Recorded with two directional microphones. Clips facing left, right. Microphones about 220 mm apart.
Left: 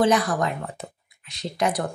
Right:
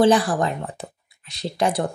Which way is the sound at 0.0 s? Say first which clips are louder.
Right 3 dB; 30° right (ahead or behind).